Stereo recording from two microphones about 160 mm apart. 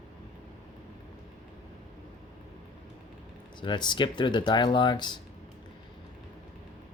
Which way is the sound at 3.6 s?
30° left (ahead or behind).